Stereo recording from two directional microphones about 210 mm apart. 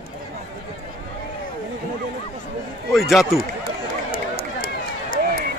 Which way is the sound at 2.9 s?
Centre (ahead or behind).